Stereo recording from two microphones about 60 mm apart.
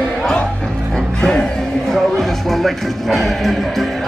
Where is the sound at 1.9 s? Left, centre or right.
Centre.